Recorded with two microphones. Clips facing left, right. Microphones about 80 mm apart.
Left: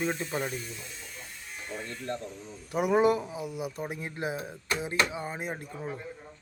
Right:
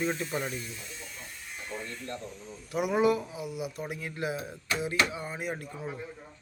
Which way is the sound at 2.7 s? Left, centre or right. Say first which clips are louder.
Left 2 dB; left.